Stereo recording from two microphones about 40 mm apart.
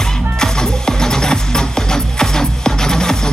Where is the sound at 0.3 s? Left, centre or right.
Centre.